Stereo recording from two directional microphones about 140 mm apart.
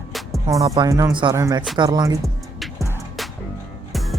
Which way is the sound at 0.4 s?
25° right (ahead or behind).